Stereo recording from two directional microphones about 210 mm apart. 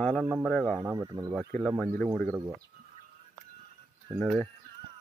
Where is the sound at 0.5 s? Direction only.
5° left (ahead or behind).